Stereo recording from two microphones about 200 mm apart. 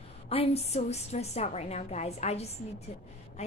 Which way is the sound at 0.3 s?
30° left (ahead or behind).